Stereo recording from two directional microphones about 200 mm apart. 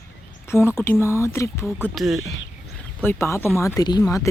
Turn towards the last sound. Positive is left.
turn(degrees=15)  # may be behind; listen again after turning